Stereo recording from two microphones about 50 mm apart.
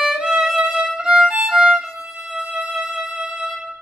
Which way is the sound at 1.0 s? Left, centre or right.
Centre.